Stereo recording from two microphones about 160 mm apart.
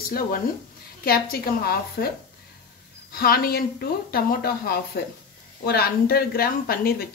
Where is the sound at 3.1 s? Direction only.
70° left (ahead or behind).